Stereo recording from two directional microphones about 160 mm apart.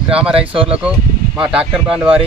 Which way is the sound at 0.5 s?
35° right (ahead or behind).